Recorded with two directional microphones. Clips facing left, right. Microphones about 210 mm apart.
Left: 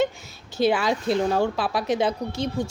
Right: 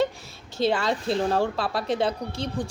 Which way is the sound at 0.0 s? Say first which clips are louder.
Left 1 dB; 30° right (ahead or behind).